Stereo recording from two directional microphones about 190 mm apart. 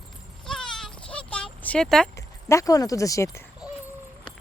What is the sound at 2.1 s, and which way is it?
Speech, 15° left (ahead or behind).